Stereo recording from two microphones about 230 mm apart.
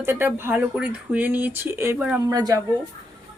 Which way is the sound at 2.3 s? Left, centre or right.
Centre.